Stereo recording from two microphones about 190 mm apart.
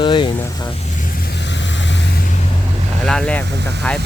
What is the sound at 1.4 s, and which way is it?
Vehicle, 70° left (ahead or behind).